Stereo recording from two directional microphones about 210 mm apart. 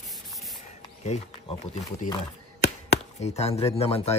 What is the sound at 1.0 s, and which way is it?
Speech, 35° left (ahead or behind).